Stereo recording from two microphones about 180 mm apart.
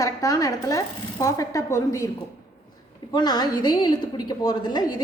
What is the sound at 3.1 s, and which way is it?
A woman's voice, 25° left (ahead or behind).